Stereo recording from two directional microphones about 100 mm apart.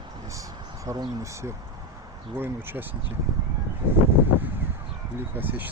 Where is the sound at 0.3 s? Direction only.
35° right (ahead or behind).